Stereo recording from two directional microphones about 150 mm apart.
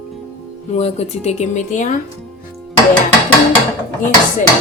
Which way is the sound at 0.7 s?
45° left (ahead or behind).